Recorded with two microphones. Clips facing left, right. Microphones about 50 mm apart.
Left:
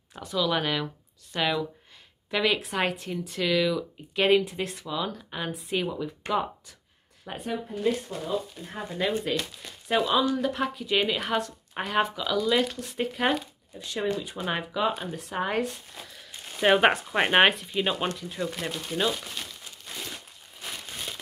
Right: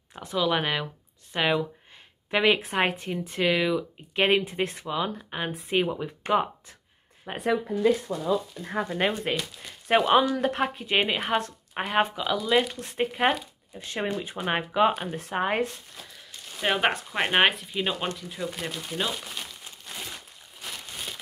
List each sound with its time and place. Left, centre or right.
0.2 s speech: right
8.1 s speech: right
8.9 s speech: right
11.7 s speech: centre
12.8 s speech: right
13.7 s speech: right
15.3 s speech: right
16.0 s speech: centre